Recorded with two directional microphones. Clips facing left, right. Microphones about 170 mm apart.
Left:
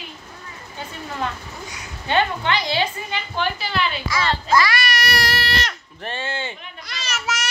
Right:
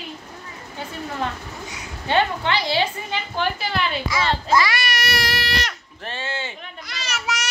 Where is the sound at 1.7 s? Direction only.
25° right (ahead or behind).